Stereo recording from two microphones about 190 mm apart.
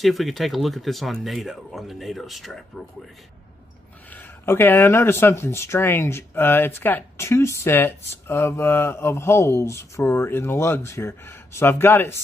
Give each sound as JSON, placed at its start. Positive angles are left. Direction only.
{"t": 0.0, "sound": "speech", "side_deg": 0}
{"t": 4.1, "sound": "speech", "side_deg": 10}